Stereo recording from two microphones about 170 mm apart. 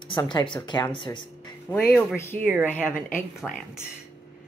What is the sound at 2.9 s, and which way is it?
Speech, 50° left (ahead or behind).